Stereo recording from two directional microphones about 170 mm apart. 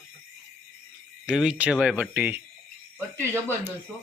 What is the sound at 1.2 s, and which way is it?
Speech, 5° right (ahead or behind).